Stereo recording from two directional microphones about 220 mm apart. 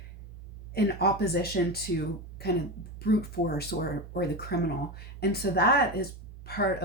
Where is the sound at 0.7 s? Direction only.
45° left (ahead or behind).